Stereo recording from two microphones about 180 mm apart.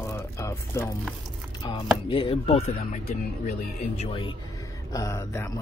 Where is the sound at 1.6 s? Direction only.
30° left (ahead or behind).